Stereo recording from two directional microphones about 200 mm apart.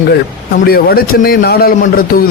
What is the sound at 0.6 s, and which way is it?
A man's voice, 50° left (ahead or behind).